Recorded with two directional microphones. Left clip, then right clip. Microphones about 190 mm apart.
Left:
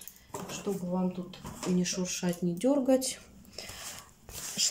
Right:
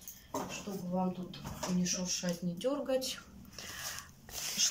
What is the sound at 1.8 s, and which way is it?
Speech, 50° left (ahead or behind).